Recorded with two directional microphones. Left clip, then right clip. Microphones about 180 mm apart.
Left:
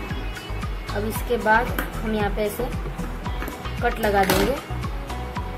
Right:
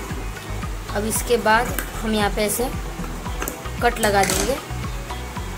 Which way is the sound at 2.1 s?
20° right (ahead or behind).